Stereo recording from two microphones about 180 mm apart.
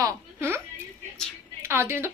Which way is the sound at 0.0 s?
15° right (ahead or behind).